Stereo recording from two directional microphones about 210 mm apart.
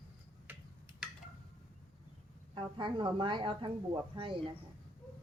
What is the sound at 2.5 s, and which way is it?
Speech, 25° right (ahead or behind).